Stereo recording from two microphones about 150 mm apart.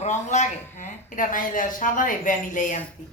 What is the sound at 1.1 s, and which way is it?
A woman's voice, 60° left (ahead or behind).